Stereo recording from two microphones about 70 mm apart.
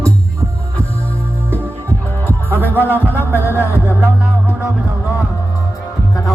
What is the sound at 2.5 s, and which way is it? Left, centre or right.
Music, left.